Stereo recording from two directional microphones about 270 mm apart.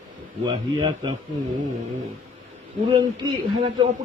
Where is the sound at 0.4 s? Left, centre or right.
Centre.